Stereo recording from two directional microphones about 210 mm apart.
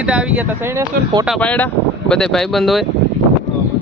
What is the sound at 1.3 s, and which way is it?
Speech, 5° left (ahead or behind).